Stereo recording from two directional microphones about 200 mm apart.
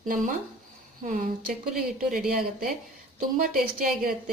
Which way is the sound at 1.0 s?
40° right (ahead or behind).